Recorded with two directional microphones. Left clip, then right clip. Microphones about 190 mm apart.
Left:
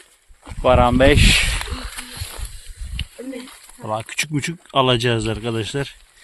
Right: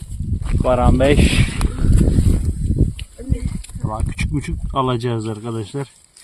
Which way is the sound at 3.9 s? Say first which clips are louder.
Left 4 dB; centre (ahead or behind).